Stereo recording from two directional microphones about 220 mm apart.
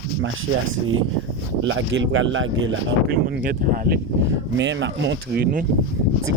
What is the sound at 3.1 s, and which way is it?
Speech, 45° right (ahead or behind).